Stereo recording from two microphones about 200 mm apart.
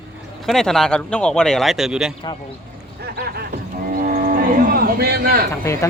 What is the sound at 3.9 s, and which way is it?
Cattle, 45° right (ahead or behind).